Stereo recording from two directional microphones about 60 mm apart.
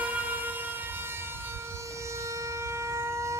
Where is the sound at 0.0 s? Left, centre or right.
Right.